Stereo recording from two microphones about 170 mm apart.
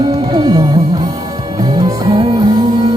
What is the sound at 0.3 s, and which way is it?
Music, 20° right (ahead or behind).